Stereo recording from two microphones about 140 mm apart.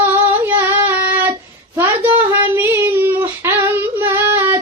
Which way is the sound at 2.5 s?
15° right (ahead or behind).